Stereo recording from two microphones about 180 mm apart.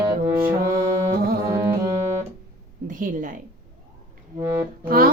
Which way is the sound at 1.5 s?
15° right (ahead or behind).